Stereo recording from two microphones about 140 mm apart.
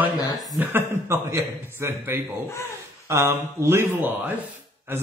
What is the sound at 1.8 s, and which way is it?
Speech, 15° right (ahead or behind).